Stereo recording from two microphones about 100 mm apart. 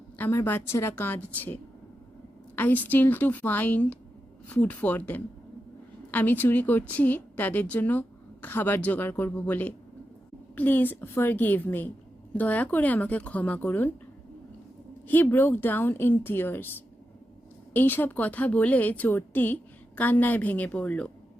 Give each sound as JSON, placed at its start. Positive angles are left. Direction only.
{"t": 0.2, "sound": "speech", "side_deg": 20}
{"t": 2.6, "sound": "a woman's voice", "side_deg": 15}
{"t": 15.0, "sound": "speech", "side_deg": 20}
{"t": 17.7, "sound": "a woman's voice", "side_deg": 20}